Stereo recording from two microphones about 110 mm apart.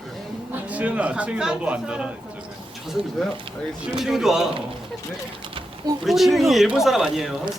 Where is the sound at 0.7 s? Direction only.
10° right (ahead or behind).